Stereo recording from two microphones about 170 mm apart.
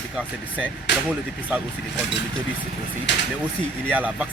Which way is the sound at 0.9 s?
90° left.